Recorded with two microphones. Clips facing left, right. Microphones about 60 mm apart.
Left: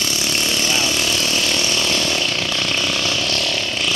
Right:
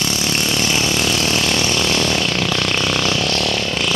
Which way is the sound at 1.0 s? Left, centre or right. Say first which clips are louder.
Right 2 dB; right.